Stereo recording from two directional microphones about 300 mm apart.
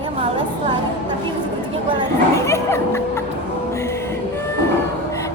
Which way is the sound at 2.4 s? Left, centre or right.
Centre.